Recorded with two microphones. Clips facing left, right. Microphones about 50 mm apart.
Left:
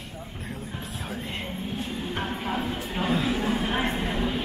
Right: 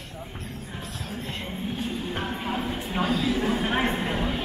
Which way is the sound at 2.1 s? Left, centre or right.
Centre.